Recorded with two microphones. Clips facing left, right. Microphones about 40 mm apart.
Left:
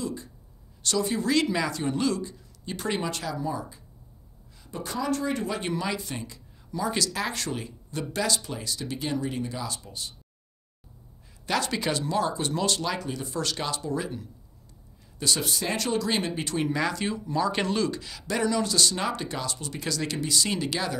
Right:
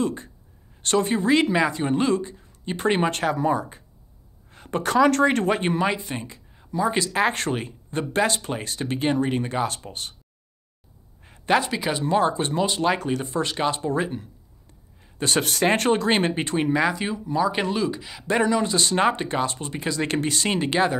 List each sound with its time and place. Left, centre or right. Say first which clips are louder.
0.0 s speech: right 7 dB; right
5.6 s speech: right 6 dB; right
11.2 s a sound: right 7 dB; right
11.6 s speech: right 2 dB; centre
12.0 s speech: right 6 dB; right
12.5 s speech: right 3 dB; centre
12.8 s speech: right 8 dB; right; by 18.0 s centre
18.2 s speech: right 5 dB; right
20.1 s speech: right 3 dB; right